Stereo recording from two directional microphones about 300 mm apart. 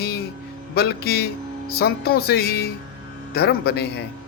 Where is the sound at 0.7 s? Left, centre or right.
Left.